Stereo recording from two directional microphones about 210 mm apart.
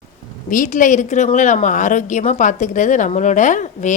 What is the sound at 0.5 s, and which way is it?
Speech, 40° left (ahead or behind).